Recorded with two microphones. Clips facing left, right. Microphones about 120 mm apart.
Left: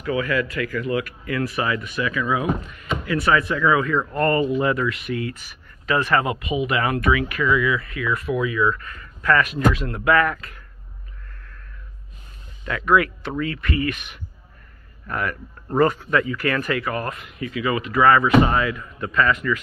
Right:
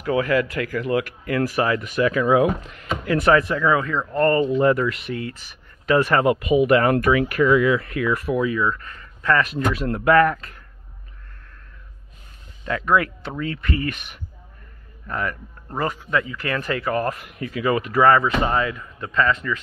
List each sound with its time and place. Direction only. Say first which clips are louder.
0.0 s speech: right 3 dB; 55° right (ahead or behind)
3.5 s speech: left 1 dB; 30° right (ahead or behind)
4.4 s speech: right 2 dB; 5° left (ahead or behind)
4.6 s speech: right 3 dB; 35° right (ahead or behind)
6.5 s speech: right 6 dB; 50° right (ahead or behind); by 9.6 s 30° right (ahead or behind)
9.8 s speech: right 3 dB; 40° right (ahead or behind)
12.6 s speech: left 1 dB; 30° right (ahead or behind)
15.0 s speech: even; 25° right (ahead or behind)
15.8 s speech: left 5 dB; 15° right (ahead or behind)